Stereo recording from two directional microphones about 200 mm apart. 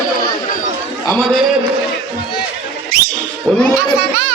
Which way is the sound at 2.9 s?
50° right (ahead or behind).